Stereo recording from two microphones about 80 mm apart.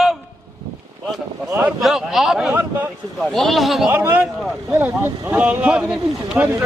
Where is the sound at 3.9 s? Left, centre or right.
Right.